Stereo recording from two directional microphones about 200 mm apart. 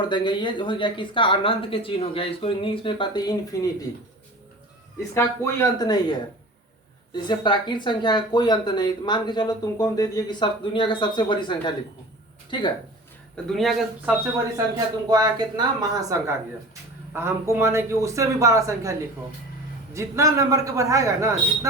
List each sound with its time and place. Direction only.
0.1 s speech: 25° left (ahead or behind)
5.1 s speech: 15° left (ahead or behind)
13.3 s speech: centre (ahead or behind)
15.1 s speech: 20° right (ahead or behind)